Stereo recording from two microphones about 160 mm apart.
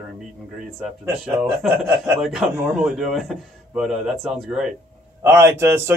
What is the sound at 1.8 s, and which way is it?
Speech, 15° right (ahead or behind).